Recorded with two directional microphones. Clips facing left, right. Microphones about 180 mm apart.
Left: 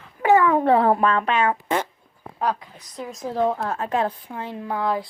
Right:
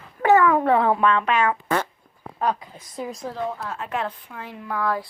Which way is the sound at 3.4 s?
55° left (ahead or behind).